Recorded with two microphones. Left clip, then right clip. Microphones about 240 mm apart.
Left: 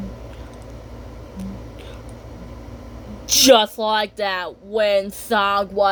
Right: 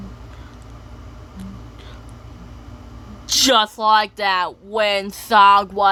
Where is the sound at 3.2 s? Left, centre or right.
Centre.